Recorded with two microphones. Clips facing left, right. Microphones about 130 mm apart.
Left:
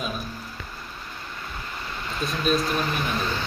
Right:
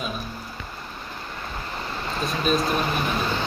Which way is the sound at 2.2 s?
Centre (ahead or behind).